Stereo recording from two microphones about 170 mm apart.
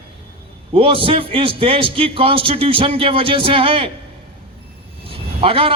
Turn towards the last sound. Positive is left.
turn(degrees=-35)  # may be behind; listen again after turning